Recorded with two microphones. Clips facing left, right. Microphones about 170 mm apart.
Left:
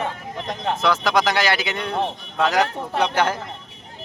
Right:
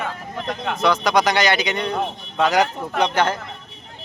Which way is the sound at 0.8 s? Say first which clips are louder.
Right 2 dB; centre (ahead or behind).